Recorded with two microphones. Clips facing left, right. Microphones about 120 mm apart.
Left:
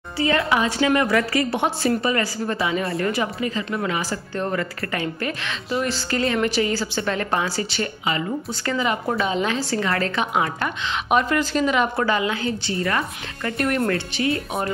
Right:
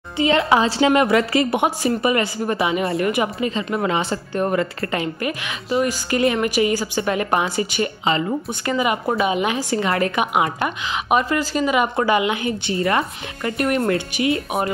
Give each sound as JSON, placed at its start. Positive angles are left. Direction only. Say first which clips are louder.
{"t": 0.2, "sound": "a woman's voice", "louder": "right 4 dB", "side_deg": -20}
{"t": 8.0, "sound": "a woman's voice", "louder": "right 4 dB", "side_deg": -30}
{"t": 8.6, "sound": "a woman's voice", "louder": "right 3 dB", "side_deg": -10}
{"t": 11.1, "sound": "a woman's voice", "louder": "right 1 dB", "side_deg": -5}
{"t": 13.6, "sound": "a woman's voice", "louder": "right 2 dB", "side_deg": -5}